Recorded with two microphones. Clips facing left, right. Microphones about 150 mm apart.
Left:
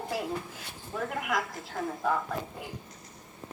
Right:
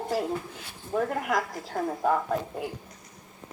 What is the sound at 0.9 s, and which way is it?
A woman's voice, 40° right (ahead or behind).